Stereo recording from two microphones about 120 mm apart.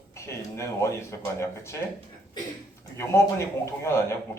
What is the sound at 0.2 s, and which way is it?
Speech, 25° left (ahead or behind).